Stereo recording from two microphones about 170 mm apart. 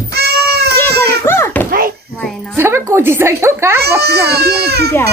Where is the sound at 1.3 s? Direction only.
15° left (ahead or behind).